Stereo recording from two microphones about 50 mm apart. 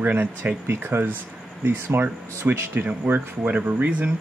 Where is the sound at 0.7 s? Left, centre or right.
Right.